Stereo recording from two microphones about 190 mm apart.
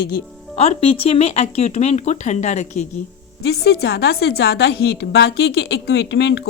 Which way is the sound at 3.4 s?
60° left (ahead or behind).